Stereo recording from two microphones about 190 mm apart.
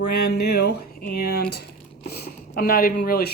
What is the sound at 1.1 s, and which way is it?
Speech, 55° left (ahead or behind).